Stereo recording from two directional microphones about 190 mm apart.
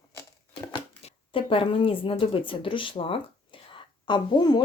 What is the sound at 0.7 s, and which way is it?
Speech, 30° left (ahead or behind).